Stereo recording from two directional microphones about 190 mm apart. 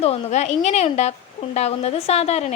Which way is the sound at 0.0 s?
35° left (ahead or behind).